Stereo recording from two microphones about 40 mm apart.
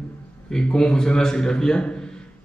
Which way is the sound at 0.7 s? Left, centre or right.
Centre.